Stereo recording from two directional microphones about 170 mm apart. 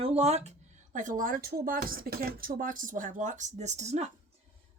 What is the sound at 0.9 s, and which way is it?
Speech, 50° right (ahead or behind).